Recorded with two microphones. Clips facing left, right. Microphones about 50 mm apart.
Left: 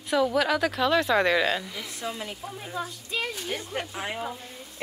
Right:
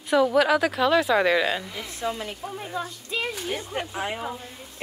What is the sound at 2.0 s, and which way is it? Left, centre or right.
Speech, right.